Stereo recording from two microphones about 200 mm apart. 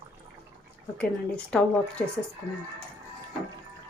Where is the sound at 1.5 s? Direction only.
5° left (ahead or behind).